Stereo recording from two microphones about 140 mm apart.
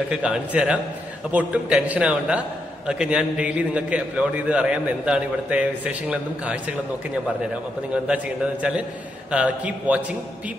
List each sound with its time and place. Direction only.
0.1 s a man's voice: 5° right (ahead or behind)
9.3 s a man's voice: 10° right (ahead or behind)